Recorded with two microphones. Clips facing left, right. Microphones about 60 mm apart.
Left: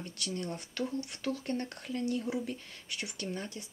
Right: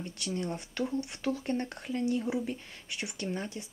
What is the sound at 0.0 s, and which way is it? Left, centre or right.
Speech, right.